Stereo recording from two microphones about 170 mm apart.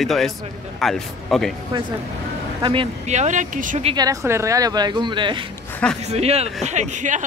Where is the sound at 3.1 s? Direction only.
45° right (ahead or behind).